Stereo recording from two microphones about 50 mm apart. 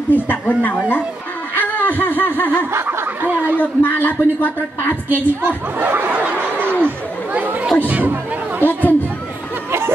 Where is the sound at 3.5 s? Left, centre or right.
Left.